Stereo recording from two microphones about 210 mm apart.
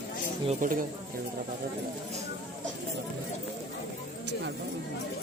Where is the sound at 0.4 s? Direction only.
40° right (ahead or behind).